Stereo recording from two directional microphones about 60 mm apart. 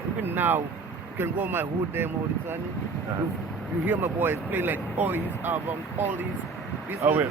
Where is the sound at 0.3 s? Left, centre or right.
Right.